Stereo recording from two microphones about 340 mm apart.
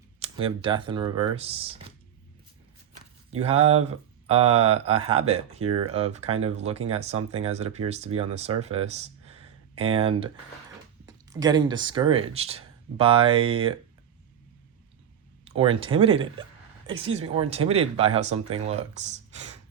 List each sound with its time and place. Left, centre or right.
0.2 s speech: centre
2.9 s a sound: centre
4.4 s speech: right
4.7 s speech: centre
15.4 s speech: centre